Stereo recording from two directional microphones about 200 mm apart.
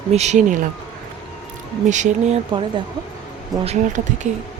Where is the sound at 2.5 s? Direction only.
25° right (ahead or behind).